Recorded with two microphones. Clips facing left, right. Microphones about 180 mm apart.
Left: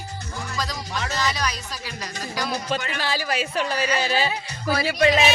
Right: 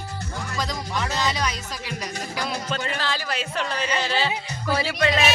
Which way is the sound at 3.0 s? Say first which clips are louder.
Left 2 dB; 10° left (ahead or behind).